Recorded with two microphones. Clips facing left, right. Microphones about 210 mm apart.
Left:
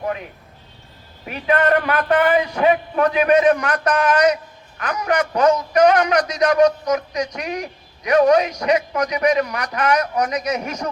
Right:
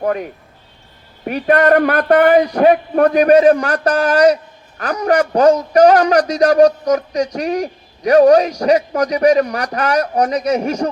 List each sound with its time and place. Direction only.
0.0 s a man's voice: 45° right (ahead or behind)